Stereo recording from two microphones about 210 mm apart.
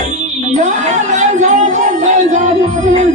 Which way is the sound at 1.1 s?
35° right (ahead or behind).